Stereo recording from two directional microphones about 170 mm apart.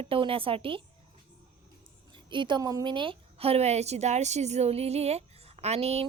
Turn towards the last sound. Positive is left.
turn(degrees=-40)  # may be behind; listen again after turning